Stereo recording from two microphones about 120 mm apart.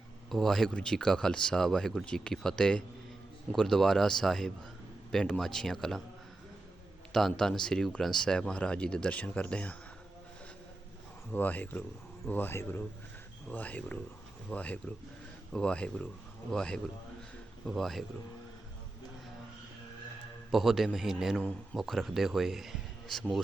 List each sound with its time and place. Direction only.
0.3 s speech: centre (ahead or behind)
7.1 s speech: 5° left (ahead or behind)
11.3 s speech: 15° left (ahead or behind)
20.5 s speech: centre (ahead or behind)